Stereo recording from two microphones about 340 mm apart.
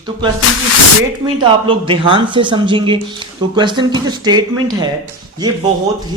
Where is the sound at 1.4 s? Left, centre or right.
Centre.